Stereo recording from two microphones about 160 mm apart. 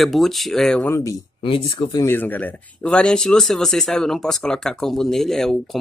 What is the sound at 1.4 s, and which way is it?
Speech, 30° left (ahead or behind).